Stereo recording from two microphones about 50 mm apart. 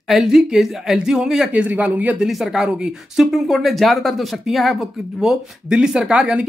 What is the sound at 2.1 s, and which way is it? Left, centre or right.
Speech, centre.